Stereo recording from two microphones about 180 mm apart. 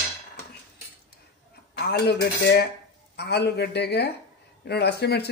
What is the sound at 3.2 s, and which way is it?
Speech, 65° left (ahead or behind).